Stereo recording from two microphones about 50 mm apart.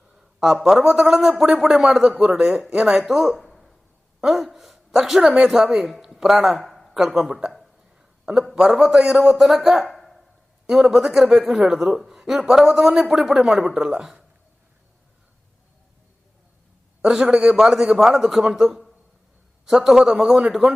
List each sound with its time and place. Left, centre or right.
0.1 s a man's voice: centre
9.9 s a sound: centre
10.9 s a man's voice: centre
13.4 s a man's voice: centre
17.0 s a man's voice: centre